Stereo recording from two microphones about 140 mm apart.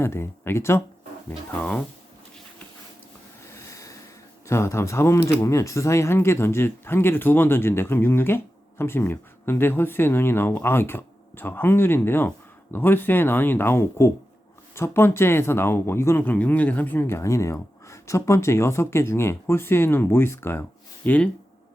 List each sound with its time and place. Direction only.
0.0 s speech: 15° left (ahead or behind)
3.4 s a sound: 20° left (ahead or behind)
4.4 s speech: 20° left (ahead or behind)